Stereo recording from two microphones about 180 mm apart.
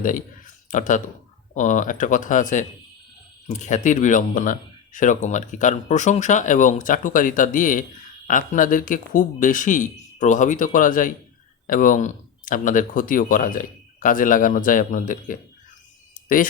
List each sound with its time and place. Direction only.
0.0 s speech: 50° left (ahead or behind)